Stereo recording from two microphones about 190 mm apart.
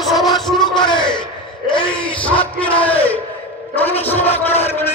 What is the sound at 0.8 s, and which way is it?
Speech, 25° left (ahead or behind).